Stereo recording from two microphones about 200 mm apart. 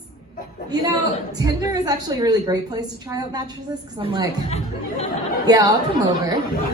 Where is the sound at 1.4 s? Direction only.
20° right (ahead or behind).